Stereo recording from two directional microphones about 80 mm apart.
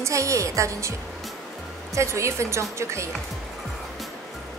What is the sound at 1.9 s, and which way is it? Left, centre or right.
A woman's voice, right.